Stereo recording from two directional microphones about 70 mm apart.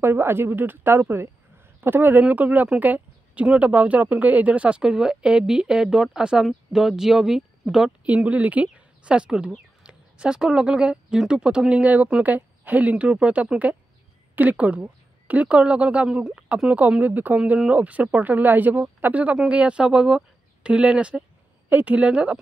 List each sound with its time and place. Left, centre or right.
0.0 s a woman's voice: right; by 7.9 s centre
8.0 s a woman's voice: centre